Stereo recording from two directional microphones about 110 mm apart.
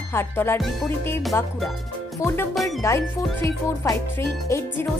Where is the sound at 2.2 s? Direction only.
25° left (ahead or behind).